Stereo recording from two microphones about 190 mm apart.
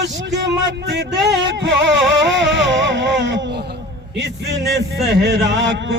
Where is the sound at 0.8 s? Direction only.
65° right (ahead or behind).